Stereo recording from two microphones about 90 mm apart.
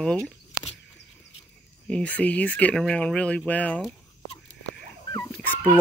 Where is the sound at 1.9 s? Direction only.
15° left (ahead or behind).